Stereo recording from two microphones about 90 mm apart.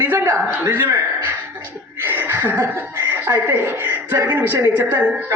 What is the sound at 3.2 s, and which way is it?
A man's voice, 25° right (ahead or behind).